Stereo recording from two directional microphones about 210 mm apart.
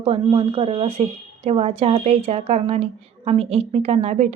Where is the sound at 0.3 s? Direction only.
30° right (ahead or behind).